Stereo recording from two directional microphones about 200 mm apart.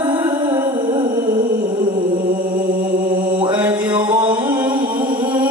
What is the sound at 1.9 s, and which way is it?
Mantra, 45° right (ahead or behind).